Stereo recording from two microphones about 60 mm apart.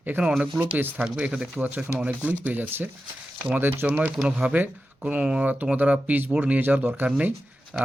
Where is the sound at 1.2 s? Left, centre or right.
Right.